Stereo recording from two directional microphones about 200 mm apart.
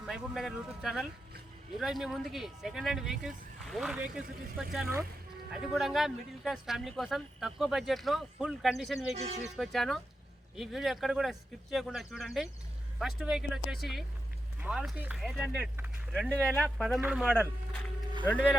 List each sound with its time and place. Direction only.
0.0 s speech: centre (ahead or behind)
9.1 s speech: 30° right (ahead or behind)
9.6 s a man's voice: centre (ahead or behind)